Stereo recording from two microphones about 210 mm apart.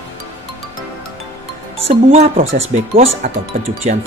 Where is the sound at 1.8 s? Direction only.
30° right (ahead or behind).